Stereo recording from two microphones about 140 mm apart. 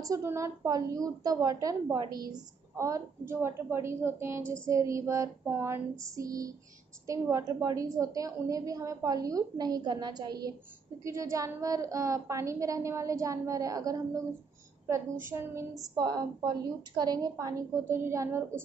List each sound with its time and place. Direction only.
0.0 s a woman's voice: 20° right (ahead or behind)
15.2 s a woman's voice: 20° right (ahead or behind)